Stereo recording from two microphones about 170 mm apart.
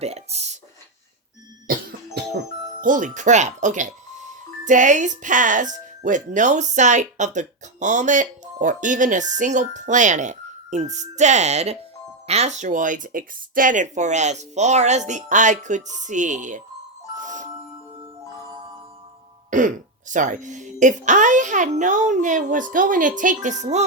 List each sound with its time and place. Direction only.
0.0 s speech: 40° right (ahead or behind)
2.8 s speech: 50° right (ahead or behind)
17.2 s music: 50° right (ahead or behind)
19.5 s speech: 50° right (ahead or behind)